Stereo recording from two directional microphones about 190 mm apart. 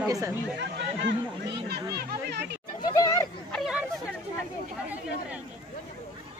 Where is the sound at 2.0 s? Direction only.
60° right (ahead or behind).